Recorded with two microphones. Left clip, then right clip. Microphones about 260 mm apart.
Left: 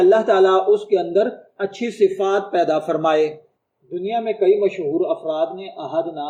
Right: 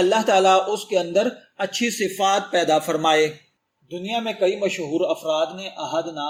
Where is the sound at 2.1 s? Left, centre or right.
Right.